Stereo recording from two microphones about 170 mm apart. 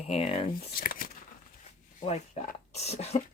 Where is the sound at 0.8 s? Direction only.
55° left (ahead or behind).